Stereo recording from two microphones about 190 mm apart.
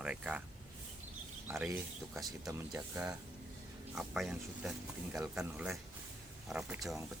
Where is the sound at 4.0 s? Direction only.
Centre (ahead or behind).